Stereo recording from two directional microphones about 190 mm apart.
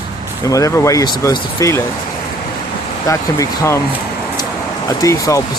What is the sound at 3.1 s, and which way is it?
Speech, 15° left (ahead or behind).